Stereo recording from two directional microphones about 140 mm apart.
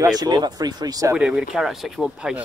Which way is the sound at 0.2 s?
30° right (ahead or behind).